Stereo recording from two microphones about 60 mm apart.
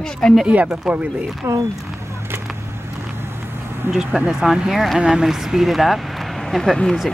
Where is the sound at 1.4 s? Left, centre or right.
Right.